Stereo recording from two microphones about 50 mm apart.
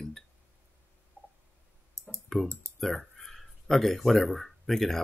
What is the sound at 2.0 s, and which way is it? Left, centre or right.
Clicking, right.